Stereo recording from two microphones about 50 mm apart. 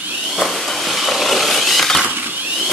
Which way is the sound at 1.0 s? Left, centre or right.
Centre.